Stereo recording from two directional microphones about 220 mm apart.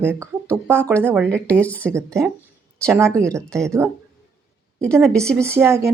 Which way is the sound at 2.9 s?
10° right (ahead or behind).